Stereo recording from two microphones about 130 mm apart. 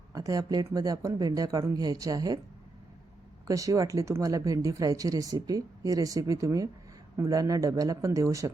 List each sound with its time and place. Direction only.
0.1 s speech: 25° right (ahead or behind)
3.4 s speech: 25° right (ahead or behind)